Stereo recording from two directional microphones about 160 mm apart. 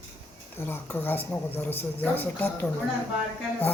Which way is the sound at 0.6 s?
15° left (ahead or behind).